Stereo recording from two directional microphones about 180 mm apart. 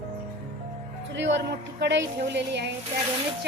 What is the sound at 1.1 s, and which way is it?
A woman's voice, 80° right.